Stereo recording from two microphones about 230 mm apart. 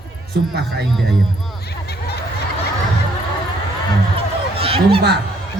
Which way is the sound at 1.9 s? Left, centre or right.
Left.